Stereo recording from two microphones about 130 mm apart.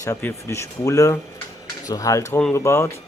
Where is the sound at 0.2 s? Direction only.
20° left (ahead or behind).